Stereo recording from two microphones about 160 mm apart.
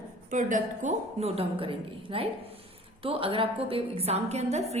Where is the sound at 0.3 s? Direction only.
50° right (ahead or behind).